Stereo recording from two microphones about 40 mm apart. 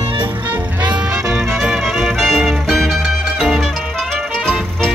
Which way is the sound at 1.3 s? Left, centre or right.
Centre.